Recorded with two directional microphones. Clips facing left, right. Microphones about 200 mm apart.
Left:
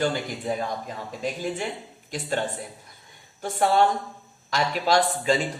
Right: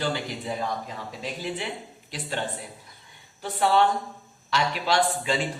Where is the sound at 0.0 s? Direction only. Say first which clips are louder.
Left 3 dB; 50° left (ahead or behind).